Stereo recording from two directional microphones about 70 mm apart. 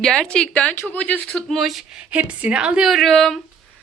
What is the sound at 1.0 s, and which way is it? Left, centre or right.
Speech, centre.